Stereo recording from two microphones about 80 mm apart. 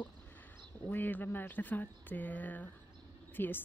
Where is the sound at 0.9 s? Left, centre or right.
Left.